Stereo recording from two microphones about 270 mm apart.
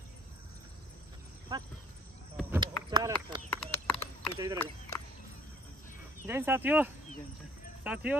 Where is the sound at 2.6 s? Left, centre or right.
Centre.